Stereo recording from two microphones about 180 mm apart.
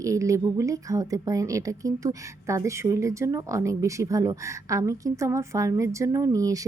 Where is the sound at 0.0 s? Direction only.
15° right (ahead or behind).